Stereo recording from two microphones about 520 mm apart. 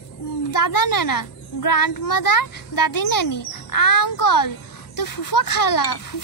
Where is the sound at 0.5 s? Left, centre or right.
Left.